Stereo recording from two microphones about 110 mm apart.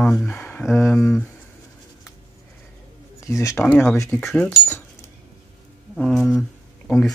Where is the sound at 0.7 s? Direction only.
25° left (ahead or behind).